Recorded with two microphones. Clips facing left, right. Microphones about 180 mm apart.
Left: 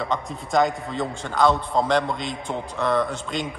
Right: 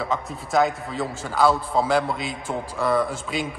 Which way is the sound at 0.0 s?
5° right (ahead or behind).